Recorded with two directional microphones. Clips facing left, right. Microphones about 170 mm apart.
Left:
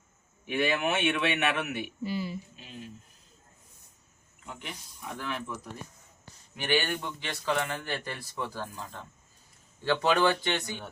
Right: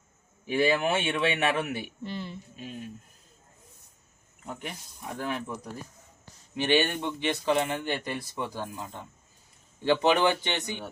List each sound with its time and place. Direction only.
0.4 s a man's voice: 35° right (ahead or behind)
2.0 s speech: 5° left (ahead or behind)
5.1 s speech: 45° right (ahead or behind)
6.6 s speech: 25° right (ahead or behind)